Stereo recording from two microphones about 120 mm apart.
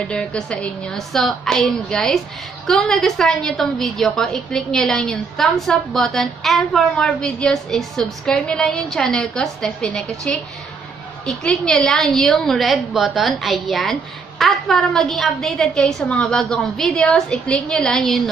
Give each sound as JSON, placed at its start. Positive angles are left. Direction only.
{"t": 0.1, "sound": "a woman's voice", "side_deg": 10}